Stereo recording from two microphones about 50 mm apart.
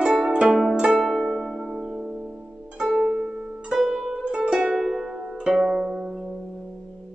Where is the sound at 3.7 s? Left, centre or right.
Centre.